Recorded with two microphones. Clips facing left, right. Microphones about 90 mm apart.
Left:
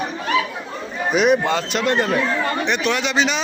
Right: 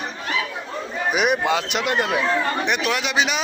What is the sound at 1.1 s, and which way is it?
A man's voice, 10° right (ahead or behind).